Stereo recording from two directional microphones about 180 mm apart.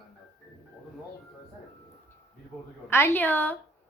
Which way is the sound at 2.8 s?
10° left (ahead or behind).